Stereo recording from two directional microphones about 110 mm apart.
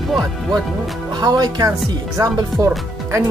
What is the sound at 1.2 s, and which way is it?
Speech, 40° right (ahead or behind).